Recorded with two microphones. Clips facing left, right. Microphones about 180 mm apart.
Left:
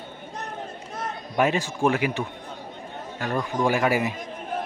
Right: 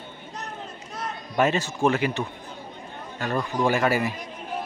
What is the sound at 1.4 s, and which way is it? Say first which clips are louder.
Speech: even; 10° left (ahead or behind).